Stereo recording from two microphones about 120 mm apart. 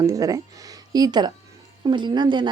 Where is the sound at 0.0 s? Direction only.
25° right (ahead or behind).